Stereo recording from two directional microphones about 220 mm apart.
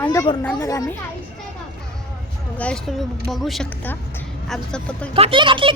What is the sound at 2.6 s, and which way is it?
Speech, 5° left (ahead or behind).